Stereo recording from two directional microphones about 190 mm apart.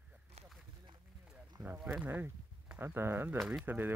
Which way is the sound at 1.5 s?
10° right (ahead or behind).